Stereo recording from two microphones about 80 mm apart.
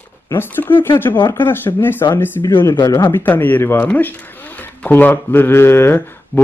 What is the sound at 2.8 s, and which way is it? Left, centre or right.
Speech, left.